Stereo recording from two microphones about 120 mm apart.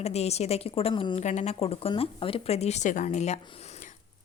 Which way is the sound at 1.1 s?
70° left (ahead or behind).